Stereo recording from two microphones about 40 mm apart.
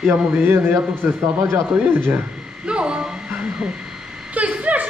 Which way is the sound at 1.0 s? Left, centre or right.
Right.